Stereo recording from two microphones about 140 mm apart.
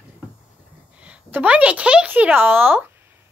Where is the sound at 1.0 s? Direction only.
10° right (ahead or behind).